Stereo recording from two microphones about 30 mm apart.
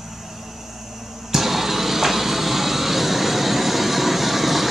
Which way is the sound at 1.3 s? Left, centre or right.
Centre.